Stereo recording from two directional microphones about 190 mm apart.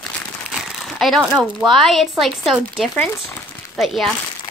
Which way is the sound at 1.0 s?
Centre (ahead or behind).